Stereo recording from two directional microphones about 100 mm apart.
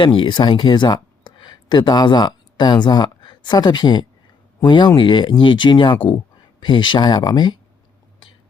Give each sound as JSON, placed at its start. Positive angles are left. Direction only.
{"t": 0.0, "sound": "speech", "side_deg": 55}